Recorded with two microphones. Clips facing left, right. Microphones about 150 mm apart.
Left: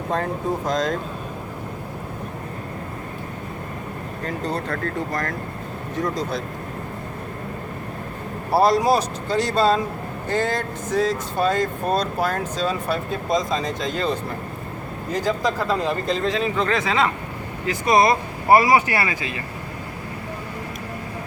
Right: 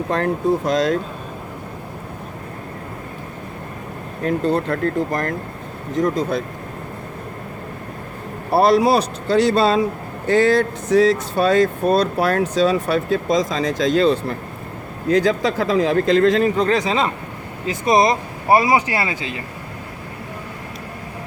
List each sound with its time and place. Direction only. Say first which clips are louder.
0.1 s speech: right 5 dB; 75° right (ahead or behind)
4.3 s speech: right 8 dB; 60° right (ahead or behind)
8.5 s speech: right 3 dB; 65° right (ahead or behind); by 16.3 s 90° right
16.3 s speech: right 5 dB; 45° right (ahead or behind)
17.7 s speech: right 1 dB; 25° right (ahead or behind)